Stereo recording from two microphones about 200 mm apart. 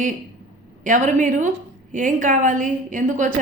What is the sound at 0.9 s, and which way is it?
A woman's voice, 40° right (ahead or behind).